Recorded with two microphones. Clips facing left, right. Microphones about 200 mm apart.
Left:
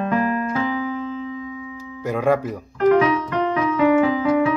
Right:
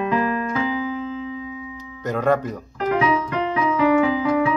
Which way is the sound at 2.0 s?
10° left (ahead or behind).